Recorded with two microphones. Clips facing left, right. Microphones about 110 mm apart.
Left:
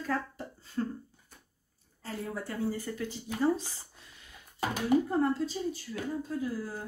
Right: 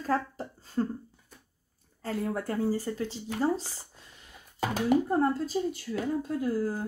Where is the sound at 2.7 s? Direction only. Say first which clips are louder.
Right 5 dB; 30° right (ahead or behind).